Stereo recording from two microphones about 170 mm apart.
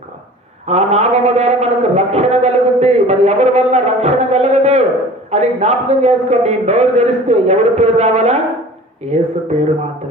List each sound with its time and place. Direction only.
0.7 s a man's voice: 40° right (ahead or behind)